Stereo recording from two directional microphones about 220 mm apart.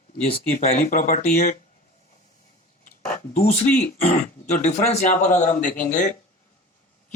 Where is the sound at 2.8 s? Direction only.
35° left (ahead or behind).